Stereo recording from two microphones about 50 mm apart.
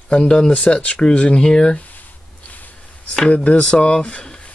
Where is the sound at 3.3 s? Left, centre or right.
Left.